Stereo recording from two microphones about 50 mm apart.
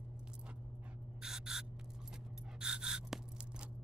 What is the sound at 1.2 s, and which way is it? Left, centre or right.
Owl, centre.